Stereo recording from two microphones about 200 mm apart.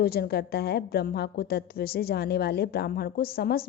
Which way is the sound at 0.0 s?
50° left (ahead or behind).